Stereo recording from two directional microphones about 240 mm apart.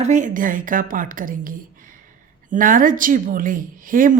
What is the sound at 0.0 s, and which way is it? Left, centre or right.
A woman's voice, right.